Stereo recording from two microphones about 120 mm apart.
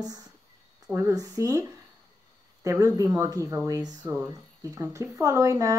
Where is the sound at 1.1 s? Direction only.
30° right (ahead or behind).